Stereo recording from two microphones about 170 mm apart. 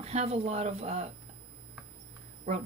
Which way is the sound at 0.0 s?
40° right (ahead or behind).